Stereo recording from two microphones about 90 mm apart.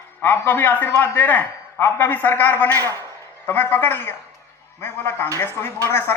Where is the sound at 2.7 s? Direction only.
40° right (ahead or behind).